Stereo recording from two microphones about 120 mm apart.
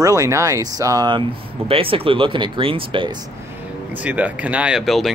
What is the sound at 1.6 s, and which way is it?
Speech, 50° right (ahead or behind).